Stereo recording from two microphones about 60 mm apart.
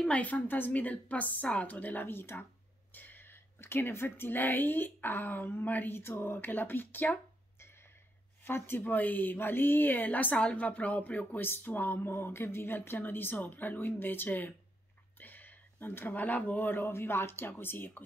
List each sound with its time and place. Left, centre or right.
0.0 s a woman's voice: left
8.5 s speech: left
15.1 s a sound: left
16.1 s a woman's voice: left
16.8 s speech: left